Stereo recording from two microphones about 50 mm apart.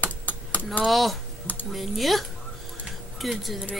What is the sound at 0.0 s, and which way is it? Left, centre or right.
Computer keyboard, left.